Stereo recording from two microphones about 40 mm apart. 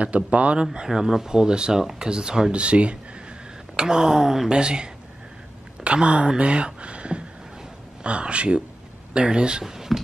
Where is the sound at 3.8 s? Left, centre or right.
Centre.